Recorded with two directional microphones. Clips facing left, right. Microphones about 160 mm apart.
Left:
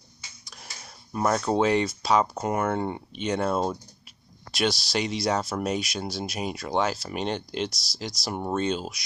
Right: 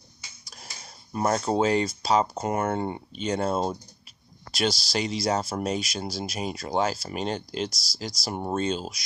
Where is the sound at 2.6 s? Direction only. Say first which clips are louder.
Left 1 dB; 40° right (ahead or behind).